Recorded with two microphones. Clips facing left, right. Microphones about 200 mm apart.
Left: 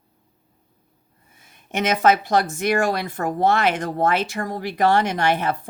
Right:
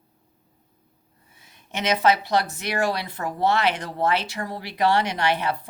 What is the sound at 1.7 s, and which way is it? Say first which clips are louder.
A woman's voice: left 3 dB; 50° left (ahead or behind).